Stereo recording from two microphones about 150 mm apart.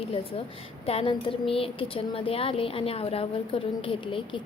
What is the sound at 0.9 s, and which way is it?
A woman's voice, 40° left (ahead or behind).